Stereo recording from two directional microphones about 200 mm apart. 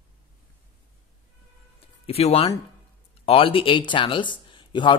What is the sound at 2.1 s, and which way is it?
Speech, 30° left (ahead or behind).